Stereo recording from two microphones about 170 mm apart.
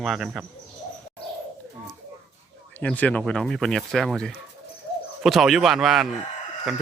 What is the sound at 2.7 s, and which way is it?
Speech, 10° left (ahead or behind).